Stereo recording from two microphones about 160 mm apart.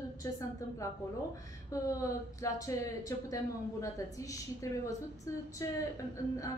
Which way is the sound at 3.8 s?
20° left (ahead or behind).